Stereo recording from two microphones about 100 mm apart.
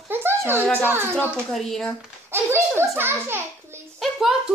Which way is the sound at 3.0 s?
25° right (ahead or behind).